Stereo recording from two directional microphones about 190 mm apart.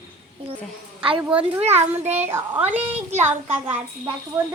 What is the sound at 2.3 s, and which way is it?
Speech, 10° right (ahead or behind).